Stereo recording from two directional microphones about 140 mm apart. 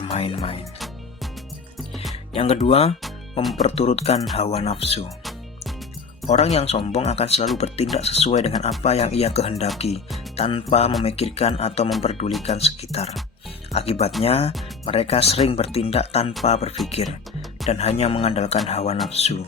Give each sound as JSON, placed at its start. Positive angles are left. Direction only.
{"t": 0.0, "sound": "speech", "side_deg": 40}
{"t": 2.3, "sound": "speech", "side_deg": 45}
{"t": 6.2, "sound": "speech", "side_deg": 50}